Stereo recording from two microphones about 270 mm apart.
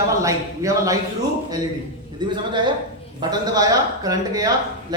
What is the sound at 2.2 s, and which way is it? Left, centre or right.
A man's voice, centre.